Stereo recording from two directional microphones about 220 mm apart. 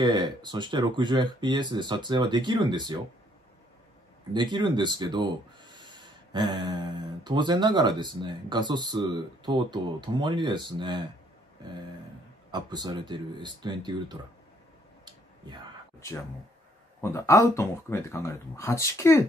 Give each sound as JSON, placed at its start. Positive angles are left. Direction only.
{"t": 0.0, "sound": "speech", "side_deg": -20}
{"t": 4.3, "sound": "speech", "side_deg": -20}
{"t": 12.4, "sound": "speech", "side_deg": -20}
{"t": 15.0, "sound": "a sound", "side_deg": -20}
{"t": 17.0, "sound": "speech", "side_deg": 15}